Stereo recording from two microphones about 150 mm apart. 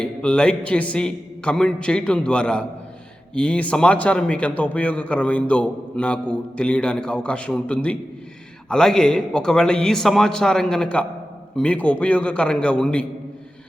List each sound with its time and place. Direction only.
0.0 s a man's voice: 5° left (ahead or behind)